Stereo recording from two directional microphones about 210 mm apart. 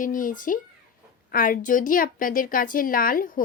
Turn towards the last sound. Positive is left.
turn(degrees=40)  # may be behind; listen again after turning